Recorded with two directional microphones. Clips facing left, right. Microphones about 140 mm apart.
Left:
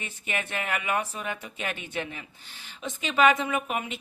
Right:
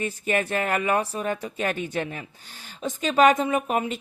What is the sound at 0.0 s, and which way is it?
Speech, 40° right (ahead or behind).